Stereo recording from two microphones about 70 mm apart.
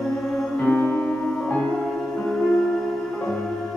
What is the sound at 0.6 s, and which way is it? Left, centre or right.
Music, left.